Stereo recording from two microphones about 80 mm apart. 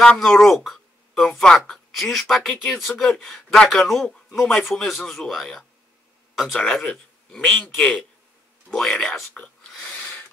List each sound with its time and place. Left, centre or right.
0.0 s a man's voice: centre